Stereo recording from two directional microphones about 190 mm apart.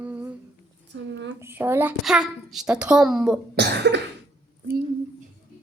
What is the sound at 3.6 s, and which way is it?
Cough, 60° right (ahead or behind).